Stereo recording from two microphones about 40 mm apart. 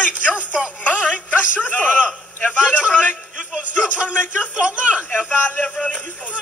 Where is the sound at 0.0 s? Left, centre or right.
Left.